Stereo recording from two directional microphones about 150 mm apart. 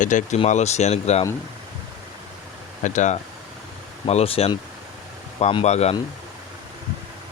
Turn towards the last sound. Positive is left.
turn(degrees=45)  # may be behind; listen again after turning